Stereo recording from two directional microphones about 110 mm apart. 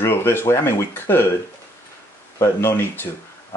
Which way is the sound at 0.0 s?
20° left (ahead or behind).